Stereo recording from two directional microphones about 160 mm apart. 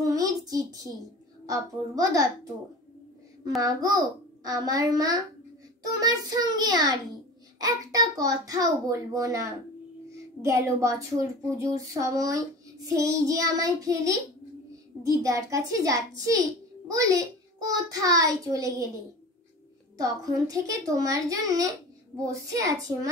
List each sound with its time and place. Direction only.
0.0 s a sound: 20° right (ahead or behind)
0.5 s speech: 25° right (ahead or behind)
3.6 s a child's voice: 25° right (ahead or behind)
20.0 s speech: 20° right (ahead or behind)